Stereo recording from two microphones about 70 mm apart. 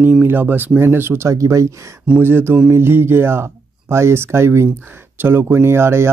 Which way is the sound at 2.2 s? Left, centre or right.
Right.